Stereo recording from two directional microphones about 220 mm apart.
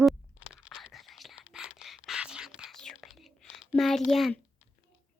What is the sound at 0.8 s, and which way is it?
Whispering, centre (ahead or behind).